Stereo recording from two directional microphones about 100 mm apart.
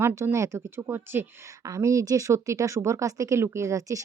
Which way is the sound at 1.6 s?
35° right (ahead or behind).